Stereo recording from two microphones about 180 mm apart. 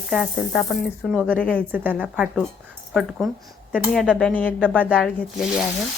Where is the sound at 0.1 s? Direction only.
Centre (ahead or behind).